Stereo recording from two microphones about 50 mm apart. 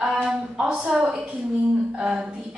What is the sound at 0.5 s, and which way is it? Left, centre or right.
A woman's voice, centre.